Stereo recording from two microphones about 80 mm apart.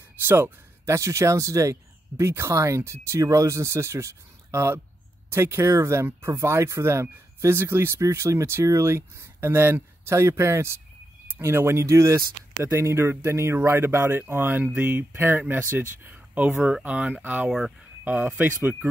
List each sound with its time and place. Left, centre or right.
0.2 s speech: right
17.5 s speech: centre
18.0 s speech: right